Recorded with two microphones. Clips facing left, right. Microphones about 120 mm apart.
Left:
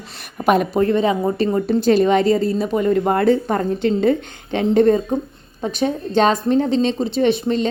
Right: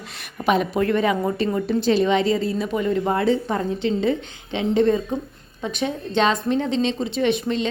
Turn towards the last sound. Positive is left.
turn(degrees=40)  # may be behind; listen again after turning